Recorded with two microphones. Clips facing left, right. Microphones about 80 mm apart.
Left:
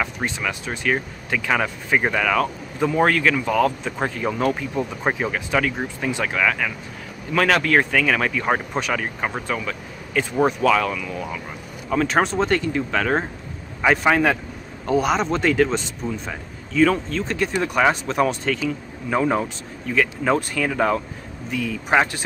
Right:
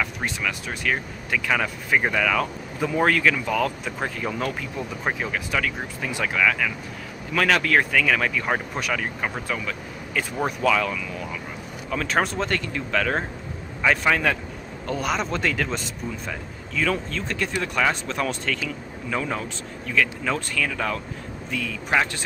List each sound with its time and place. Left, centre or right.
0.0 s speech: centre
14.9 s speech: centre
19.0 s speech: left